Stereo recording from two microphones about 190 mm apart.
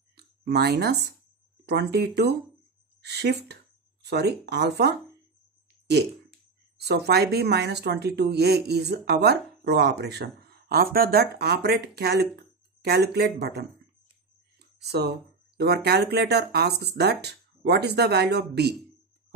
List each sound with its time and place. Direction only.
0.2 s speech: 60° right (ahead or behind)
6.8 s speech: 60° right (ahead or behind)
14.9 s speech: 60° right (ahead or behind)